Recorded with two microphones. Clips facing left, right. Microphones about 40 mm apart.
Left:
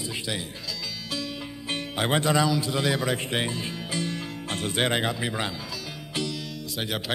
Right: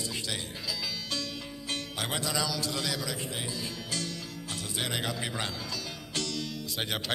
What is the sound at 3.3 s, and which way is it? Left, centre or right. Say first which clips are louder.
Speech: left 9 dB; left.